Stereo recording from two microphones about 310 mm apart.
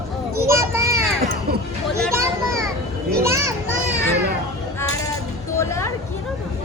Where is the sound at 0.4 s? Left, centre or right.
Centre.